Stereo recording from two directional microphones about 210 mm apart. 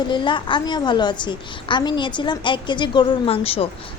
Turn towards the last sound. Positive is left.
turn(degrees=25)  # may be behind; listen again after turning